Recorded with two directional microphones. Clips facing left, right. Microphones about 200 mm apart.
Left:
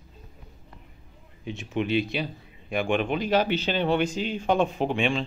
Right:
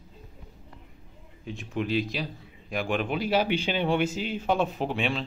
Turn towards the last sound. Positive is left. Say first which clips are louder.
# left 3 dB
turn(degrees=-5)  # may be behind; listen again after turning